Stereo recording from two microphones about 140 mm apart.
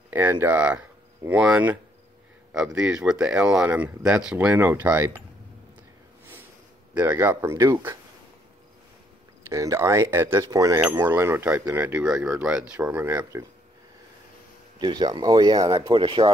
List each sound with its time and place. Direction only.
0.1 s speech: 15° right (ahead or behind)
6.9 s speech: 10° right (ahead or behind)
7.2 s speech: 25° right (ahead or behind)
9.5 s speech: 20° right (ahead or behind)
14.8 s speech: 30° right (ahead or behind)
15.9 s speech: 35° right (ahead or behind)